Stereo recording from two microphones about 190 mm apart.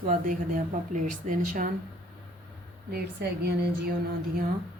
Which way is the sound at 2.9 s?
60° right (ahead or behind).